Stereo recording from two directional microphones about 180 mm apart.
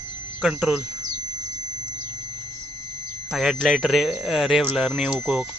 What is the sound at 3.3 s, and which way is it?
Speech, centre (ahead or behind).